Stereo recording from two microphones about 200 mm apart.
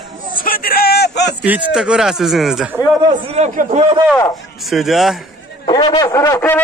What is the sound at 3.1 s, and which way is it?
Speech, 35° right (ahead or behind).